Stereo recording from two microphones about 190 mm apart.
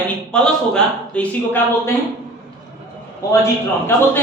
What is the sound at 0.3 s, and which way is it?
A man's voice, 5° left (ahead or behind).